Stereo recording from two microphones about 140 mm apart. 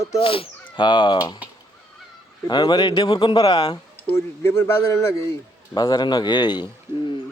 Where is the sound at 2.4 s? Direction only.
35° left (ahead or behind).